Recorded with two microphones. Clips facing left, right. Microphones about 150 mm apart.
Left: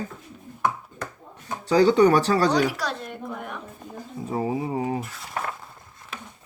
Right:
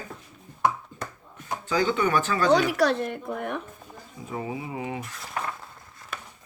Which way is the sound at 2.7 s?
60° right (ahead or behind).